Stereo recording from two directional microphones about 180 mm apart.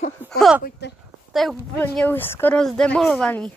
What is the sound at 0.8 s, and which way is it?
Speech, 65° left (ahead or behind).